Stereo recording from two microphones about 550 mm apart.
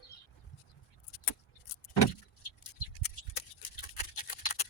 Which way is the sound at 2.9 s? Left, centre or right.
Left.